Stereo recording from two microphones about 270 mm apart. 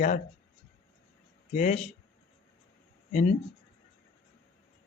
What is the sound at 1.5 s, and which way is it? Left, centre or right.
Speech, left.